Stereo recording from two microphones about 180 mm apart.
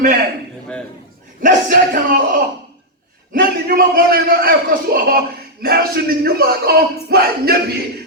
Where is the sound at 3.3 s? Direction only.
55° right (ahead or behind).